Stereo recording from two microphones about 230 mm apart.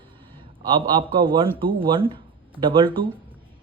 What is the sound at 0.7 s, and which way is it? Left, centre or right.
Speech, right.